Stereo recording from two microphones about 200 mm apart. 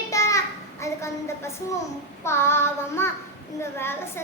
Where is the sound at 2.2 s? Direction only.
10° left (ahead or behind).